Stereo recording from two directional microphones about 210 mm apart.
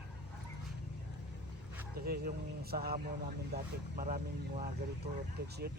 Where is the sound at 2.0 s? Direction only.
45° right (ahead or behind).